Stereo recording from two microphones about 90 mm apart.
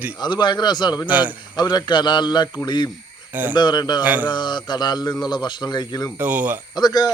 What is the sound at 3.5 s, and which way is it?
Speech, 50° left (ahead or behind).